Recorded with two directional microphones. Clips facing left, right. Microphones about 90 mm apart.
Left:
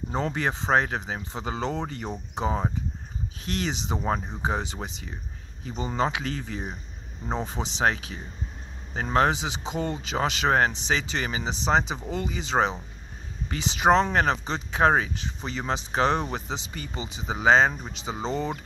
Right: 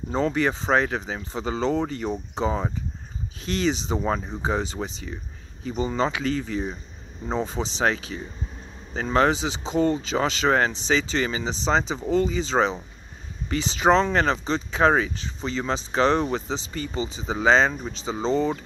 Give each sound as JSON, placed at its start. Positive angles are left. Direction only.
{"t": 0.1, "sound": "speech", "side_deg": 20}